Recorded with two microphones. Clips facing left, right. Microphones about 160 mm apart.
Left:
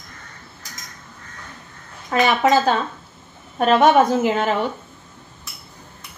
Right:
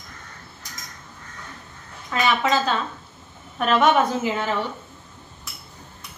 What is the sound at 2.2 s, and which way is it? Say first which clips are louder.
A woman's voice: left 5 dB; 45° left (ahead or behind).